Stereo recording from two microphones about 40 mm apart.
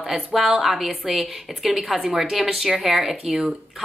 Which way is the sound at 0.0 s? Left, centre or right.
Centre.